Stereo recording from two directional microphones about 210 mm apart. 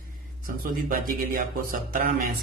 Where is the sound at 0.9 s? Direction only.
40° right (ahead or behind).